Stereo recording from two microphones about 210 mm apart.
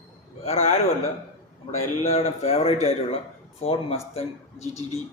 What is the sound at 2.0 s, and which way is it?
Speech, 30° left (ahead or behind).